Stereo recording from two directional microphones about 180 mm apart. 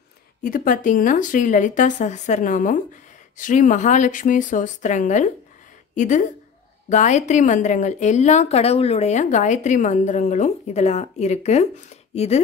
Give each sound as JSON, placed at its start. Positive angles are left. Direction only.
{"t": 0.4, "sound": "a woman's voice", "side_deg": 50}